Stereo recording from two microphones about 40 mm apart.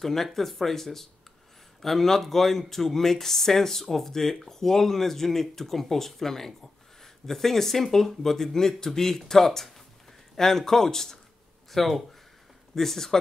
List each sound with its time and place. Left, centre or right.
0.0 s speech: centre
11.7 s speech: centre